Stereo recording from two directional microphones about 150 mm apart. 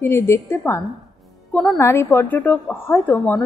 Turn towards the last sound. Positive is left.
turn(degrees=15)  # may be behind; listen again after turning